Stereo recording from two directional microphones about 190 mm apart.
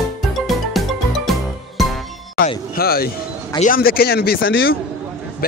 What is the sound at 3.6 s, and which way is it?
Speech, 50° left (ahead or behind).